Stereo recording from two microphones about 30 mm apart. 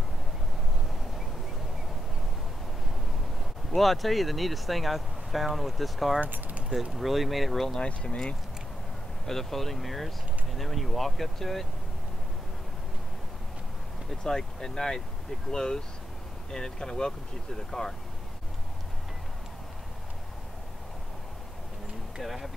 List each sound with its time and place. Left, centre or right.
3.7 s speech: centre
9.2 s speech: centre
14.2 s speech: centre
22.2 s speech: centre